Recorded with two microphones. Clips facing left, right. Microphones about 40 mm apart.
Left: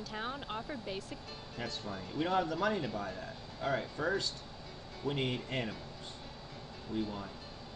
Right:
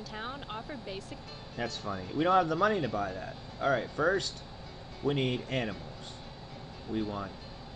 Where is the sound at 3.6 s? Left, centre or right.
Right.